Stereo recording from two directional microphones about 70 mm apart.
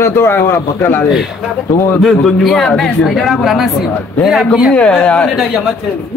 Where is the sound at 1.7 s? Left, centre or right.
Left.